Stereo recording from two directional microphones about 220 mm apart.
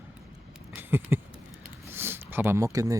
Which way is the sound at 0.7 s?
10° right (ahead or behind).